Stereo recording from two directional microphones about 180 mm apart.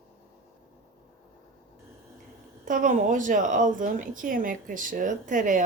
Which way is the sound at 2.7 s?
45° right (ahead or behind).